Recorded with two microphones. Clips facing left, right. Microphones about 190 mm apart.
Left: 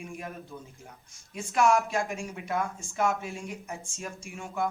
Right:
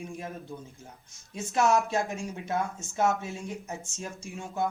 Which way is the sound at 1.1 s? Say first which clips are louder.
Right 1 dB; 20° right (ahead or behind).